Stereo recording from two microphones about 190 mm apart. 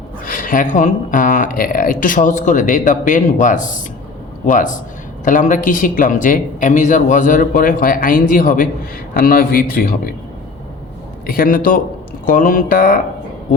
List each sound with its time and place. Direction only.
0.3 s speech: 45° left (ahead or behind)
11.3 s speech: 50° left (ahead or behind)